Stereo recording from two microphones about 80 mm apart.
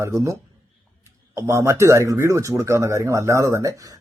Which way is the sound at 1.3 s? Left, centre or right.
Right.